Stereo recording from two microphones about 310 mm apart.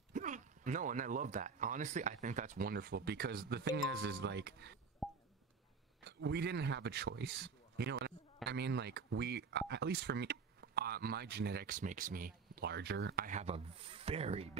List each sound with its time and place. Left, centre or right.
0.1 s speech: right
5.0 s a sound: centre
6.0 s a man's voice: right